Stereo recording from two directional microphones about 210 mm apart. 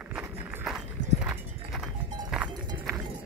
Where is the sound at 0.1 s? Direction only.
5° right (ahead or behind).